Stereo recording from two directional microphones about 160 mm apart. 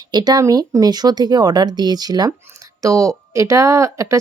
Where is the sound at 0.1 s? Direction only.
25° right (ahead or behind).